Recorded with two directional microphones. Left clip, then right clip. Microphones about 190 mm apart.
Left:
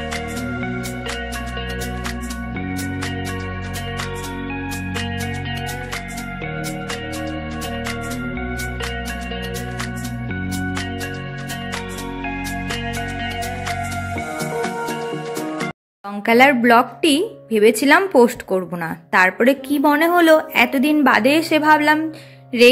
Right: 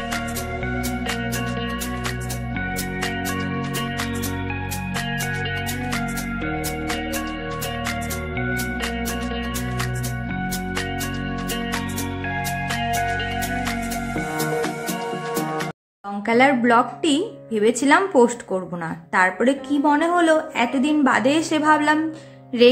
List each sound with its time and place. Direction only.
14.4 s music: centre (ahead or behind)
16.3 s a woman's voice: 25° left (ahead or behind)